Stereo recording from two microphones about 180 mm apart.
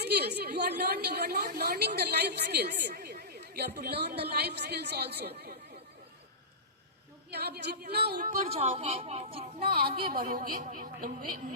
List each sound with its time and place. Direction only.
0.0 s a woman's voice: 65° right (ahead or behind)
7.3 s a woman's voice: 60° right (ahead or behind)
8.4 s a woman's voice: 35° right (ahead or behind)
9.6 s a woman's voice: 55° right (ahead or behind)